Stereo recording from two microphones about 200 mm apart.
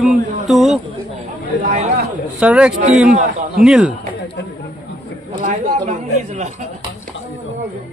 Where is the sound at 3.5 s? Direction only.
5° right (ahead or behind).